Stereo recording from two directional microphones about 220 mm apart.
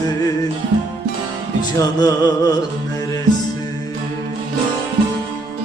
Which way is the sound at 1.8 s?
15° left (ahead or behind).